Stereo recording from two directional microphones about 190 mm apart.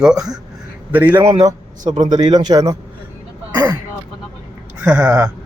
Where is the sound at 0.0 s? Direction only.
5° right (ahead or behind).